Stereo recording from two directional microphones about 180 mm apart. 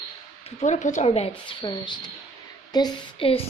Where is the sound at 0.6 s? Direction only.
40° left (ahead or behind).